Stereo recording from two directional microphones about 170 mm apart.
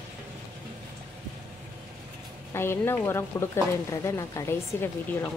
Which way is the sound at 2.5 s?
15° left (ahead or behind).